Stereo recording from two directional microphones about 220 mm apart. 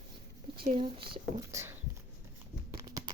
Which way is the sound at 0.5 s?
45° right (ahead or behind).